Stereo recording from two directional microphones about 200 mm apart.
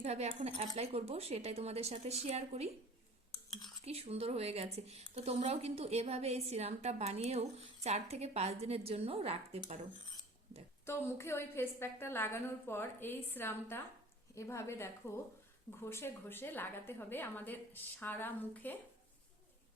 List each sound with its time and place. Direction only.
0.0 s a woman's voice: 35° right (ahead or behind)
3.8 s a woman's voice: 30° right (ahead or behind)
10.8 s a woman's voice: 10° left (ahead or behind)